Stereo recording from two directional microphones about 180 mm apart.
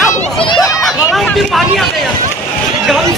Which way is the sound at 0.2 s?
30° left (ahead or behind).